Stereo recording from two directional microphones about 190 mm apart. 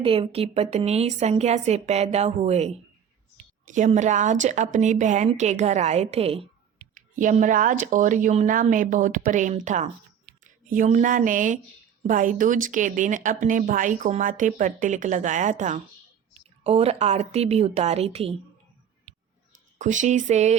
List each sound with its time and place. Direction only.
0.0 s speech: 30° right (ahead or behind)
6.9 s speech: 45° right (ahead or behind)
19.8 s speech: 40° right (ahead or behind)